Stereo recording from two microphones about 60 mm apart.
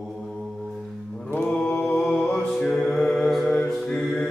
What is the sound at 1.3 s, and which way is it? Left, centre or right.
Mantra, centre.